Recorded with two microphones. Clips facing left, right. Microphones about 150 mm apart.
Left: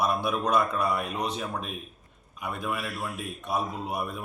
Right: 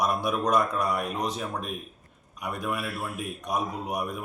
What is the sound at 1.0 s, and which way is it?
Speech, 5° right (ahead or behind).